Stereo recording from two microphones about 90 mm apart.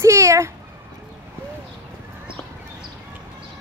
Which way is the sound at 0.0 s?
35° right (ahead or behind).